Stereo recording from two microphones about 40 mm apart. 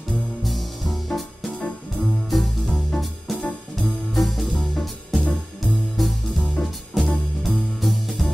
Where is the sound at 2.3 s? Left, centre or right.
Centre.